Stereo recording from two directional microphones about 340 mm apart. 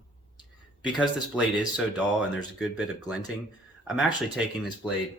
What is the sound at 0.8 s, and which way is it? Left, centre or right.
Speech, centre.